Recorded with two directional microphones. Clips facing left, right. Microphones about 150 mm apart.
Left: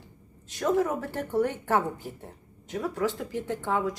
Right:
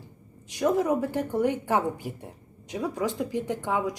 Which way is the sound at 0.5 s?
15° right (ahead or behind).